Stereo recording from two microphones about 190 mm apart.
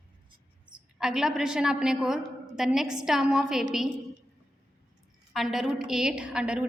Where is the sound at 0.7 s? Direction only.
5° right (ahead or behind).